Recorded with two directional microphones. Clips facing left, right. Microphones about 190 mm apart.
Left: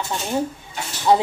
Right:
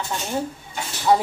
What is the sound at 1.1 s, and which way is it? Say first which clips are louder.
Speech: left 2 dB; 25° left (ahead or behind).